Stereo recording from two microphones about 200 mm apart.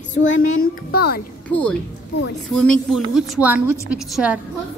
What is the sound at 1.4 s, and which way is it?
A woman's voice, 5° left (ahead or behind).